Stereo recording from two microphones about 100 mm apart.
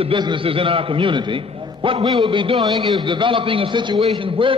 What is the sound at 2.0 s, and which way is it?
A man's voice, 45° right (ahead or behind).